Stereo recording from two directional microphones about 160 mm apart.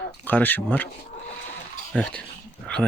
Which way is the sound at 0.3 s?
10° left (ahead or behind).